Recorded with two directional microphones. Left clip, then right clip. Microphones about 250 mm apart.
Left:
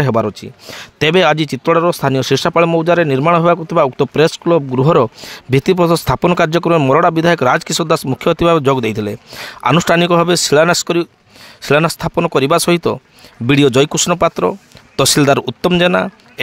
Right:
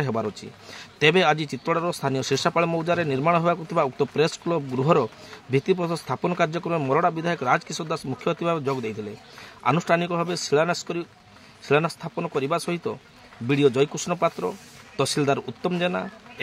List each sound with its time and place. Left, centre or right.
0.0 s speech: left